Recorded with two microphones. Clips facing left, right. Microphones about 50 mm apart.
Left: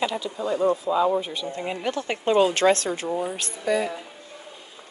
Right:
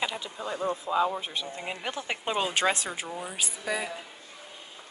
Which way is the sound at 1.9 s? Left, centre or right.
Centre.